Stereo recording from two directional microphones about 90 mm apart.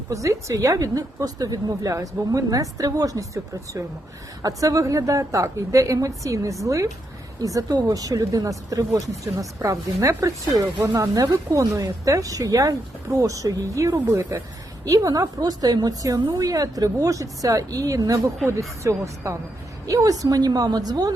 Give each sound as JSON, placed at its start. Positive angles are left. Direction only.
{"t": 0.1, "sound": "a woman's voice", "side_deg": -35}
{"t": 14.8, "sound": "a woman's voice", "side_deg": -40}